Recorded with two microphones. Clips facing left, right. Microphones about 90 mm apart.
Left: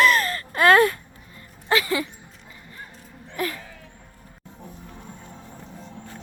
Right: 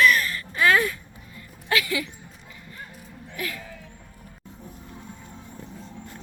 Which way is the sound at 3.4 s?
35° left (ahead or behind).